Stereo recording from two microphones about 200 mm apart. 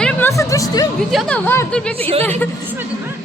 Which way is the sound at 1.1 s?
5° left (ahead or behind).